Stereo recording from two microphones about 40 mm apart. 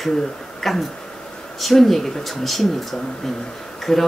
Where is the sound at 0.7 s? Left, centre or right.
Centre.